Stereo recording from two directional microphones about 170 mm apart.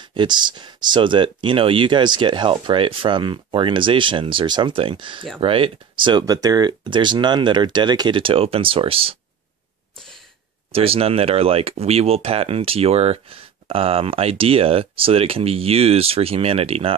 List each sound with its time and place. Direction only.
0.0 s speech: 25° right (ahead or behind)
10.7 s speech: 35° right (ahead or behind)